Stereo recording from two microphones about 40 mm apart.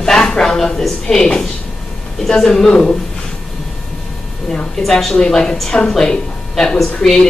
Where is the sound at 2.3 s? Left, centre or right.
Centre.